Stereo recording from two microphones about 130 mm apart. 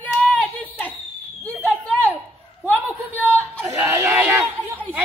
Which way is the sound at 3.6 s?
20° right (ahead or behind).